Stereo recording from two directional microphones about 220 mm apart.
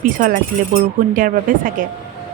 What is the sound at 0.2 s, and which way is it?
Speech, 40° right (ahead or behind).